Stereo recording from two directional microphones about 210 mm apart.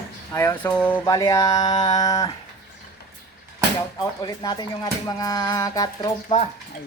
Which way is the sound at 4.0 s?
20° left (ahead or behind).